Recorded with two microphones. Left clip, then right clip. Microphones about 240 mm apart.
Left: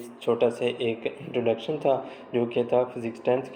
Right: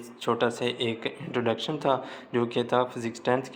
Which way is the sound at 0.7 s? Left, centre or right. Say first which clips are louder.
Left 2 dB; right.